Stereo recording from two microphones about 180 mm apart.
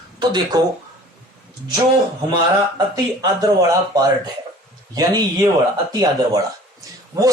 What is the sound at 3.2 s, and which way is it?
Speech, 20° right (ahead or behind).